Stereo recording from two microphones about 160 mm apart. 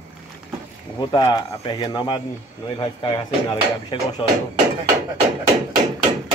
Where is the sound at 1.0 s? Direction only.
25° left (ahead or behind).